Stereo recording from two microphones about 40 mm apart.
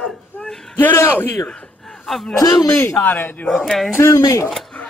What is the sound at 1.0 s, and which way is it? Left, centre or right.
Speech, left.